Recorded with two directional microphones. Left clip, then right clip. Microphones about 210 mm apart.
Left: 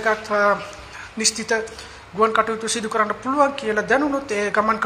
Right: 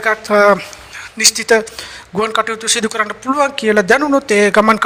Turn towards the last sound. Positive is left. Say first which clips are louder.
# right 9 dB
turn(degrees=-55)  # may be behind; listen again after turning